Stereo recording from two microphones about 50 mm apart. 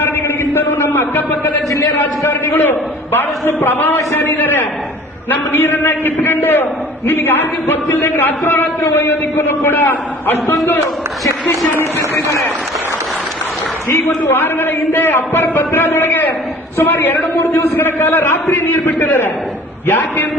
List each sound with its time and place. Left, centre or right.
0.0 s a sound: left
2.2 s a man's voice: left
11.9 s a man's voice: left
13.9 s a man's voice: left
17.4 s a man's voice: left
17.7 s a man's voice: left
18.5 s a man's voice: left